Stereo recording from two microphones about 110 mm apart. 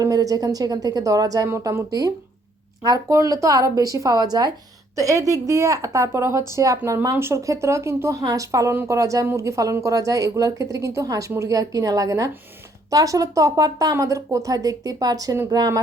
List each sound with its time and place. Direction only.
0.0 s speech: 30° right (ahead or behind)